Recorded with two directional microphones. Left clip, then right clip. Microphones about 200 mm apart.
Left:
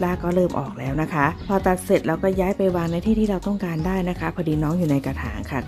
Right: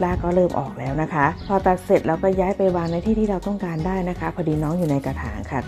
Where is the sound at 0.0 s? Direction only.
15° left (ahead or behind).